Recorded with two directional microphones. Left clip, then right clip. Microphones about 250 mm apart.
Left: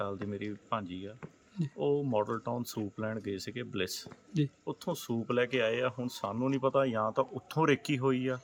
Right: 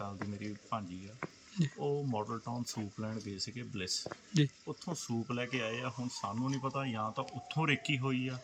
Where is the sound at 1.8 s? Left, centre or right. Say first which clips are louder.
Left 7 dB; centre.